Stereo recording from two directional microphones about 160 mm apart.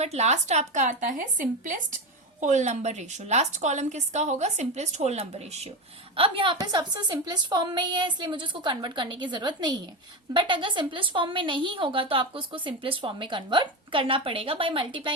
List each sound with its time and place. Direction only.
0.0 s a woman's voice: 40° right (ahead or behind)